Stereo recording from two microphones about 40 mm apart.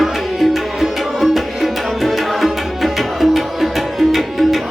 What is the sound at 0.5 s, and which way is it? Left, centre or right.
Music, centre.